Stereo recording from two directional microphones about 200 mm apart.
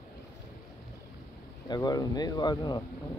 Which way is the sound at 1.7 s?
20° left (ahead or behind).